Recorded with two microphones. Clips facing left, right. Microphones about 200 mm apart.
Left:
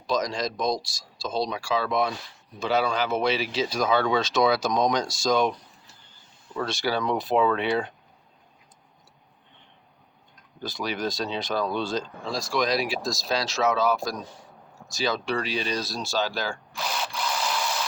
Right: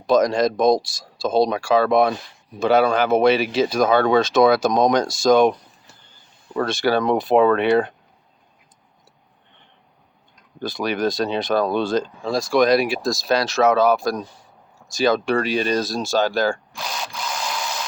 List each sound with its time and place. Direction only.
0.1 s speech: 55° right (ahead or behind)
10.6 s speech: 55° right (ahead or behind)
16.7 s tools: 5° left (ahead or behind)